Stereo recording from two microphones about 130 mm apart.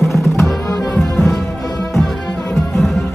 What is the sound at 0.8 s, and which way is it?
Music, centre (ahead or behind).